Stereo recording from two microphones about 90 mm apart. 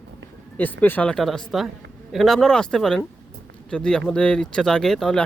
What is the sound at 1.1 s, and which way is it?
Speech, 5° left (ahead or behind).